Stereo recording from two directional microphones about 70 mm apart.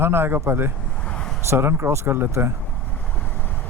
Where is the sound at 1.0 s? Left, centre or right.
Centre.